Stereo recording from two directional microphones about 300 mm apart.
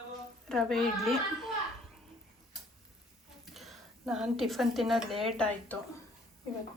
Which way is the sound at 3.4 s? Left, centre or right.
Centre.